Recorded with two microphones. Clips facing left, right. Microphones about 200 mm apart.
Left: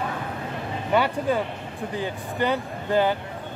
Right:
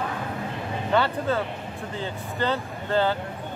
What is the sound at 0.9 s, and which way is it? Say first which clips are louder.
Speech: left 1 dB; 15° left (ahead or behind).